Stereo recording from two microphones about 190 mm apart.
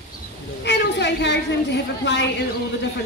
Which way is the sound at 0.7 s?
65° left (ahead or behind).